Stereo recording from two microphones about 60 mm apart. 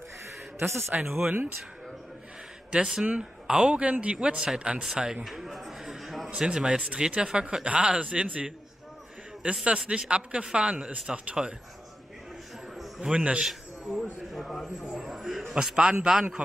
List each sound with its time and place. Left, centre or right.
0.6 s speech: right
2.7 s speech: centre
4.8 s a sound: centre
6.3 s speech: centre
13.1 s speech: centre
13.5 s a man's voice: centre